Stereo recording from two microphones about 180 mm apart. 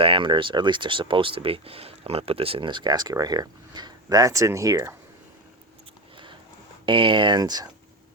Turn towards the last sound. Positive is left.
turn(degrees=-20)  # may be behind; listen again after turning